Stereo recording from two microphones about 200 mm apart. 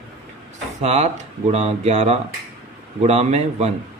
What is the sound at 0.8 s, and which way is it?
Speech, 35° right (ahead or behind).